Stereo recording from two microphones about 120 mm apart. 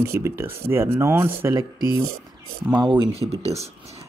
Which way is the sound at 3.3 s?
60° right (ahead or behind).